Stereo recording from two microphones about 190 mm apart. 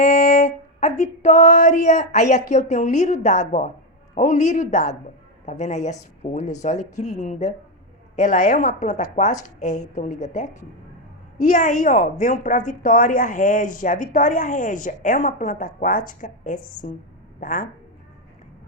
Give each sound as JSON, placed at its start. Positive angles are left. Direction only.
{"t": 0.0, "sound": "music", "side_deg": 40}
{"t": 4.1, "sound": "a woman's voice", "side_deg": 40}